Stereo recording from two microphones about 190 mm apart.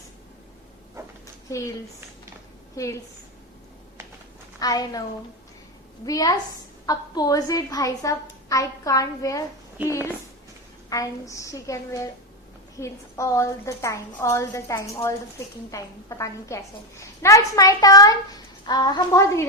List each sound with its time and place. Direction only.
1.0 s a sound: 15° right (ahead or behind)
1.5 s speech: 15° left (ahead or behind)
2.7 s a woman's voice: 15° left (ahead or behind)
4.6 s a woman's voice: 20° left (ahead or behind)
6.1 s a woman's voice: 20° left (ahead or behind)
9.8 s speech: 10° right (ahead or behind)
10.8 s a woman's voice: 20° left (ahead or behind)